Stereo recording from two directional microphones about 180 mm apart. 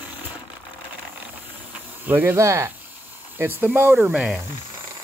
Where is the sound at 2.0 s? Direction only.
10° right (ahead or behind).